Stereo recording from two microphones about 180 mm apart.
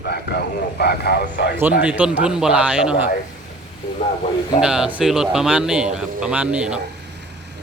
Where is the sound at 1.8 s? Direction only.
5° right (ahead or behind).